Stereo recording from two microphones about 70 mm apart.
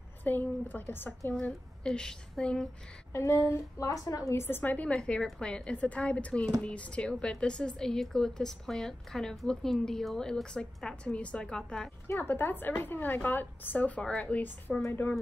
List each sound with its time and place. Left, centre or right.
0.2 s a woman's voice: left
1.8 s a woman's voice: centre
3.1 s speech: left
3.8 s a woman's voice: left
4.9 s a woman's voice: centre
12.2 s a woman's voice: left